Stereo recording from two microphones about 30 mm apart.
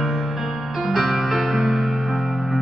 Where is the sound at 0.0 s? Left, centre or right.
Centre.